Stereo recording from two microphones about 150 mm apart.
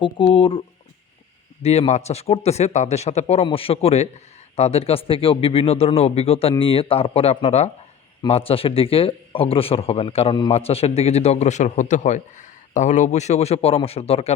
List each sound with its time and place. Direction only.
0.0 s speech: 35° left (ahead or behind)
1.6 s a man's voice: 45° left (ahead or behind)